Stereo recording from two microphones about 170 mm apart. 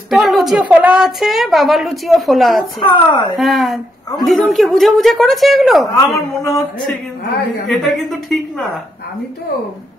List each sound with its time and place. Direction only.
0.1 s a woman's voice: centre (ahead or behind)
2.8 s speech: 30° left (ahead or behind)
3.3 s a woman's voice: centre (ahead or behind)
5.9 s a woman's voice: 20° left (ahead or behind)
7.7 s a woman's voice: centre (ahead or behind)